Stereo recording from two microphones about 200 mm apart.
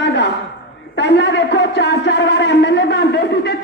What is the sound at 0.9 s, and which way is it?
Music, 60° left (ahead or behind).